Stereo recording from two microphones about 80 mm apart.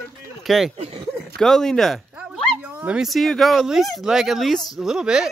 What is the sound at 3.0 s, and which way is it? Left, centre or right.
Speech, centre.